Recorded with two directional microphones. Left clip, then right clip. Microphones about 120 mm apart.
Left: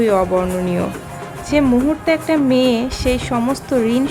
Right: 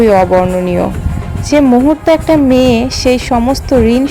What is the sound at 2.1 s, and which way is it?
Speech, 40° right (ahead or behind).